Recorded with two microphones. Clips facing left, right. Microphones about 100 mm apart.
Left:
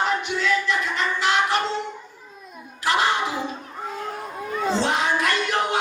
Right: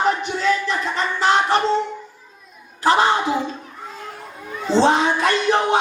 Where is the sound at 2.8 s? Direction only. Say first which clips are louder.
Right 5 dB; 35° right (ahead or behind).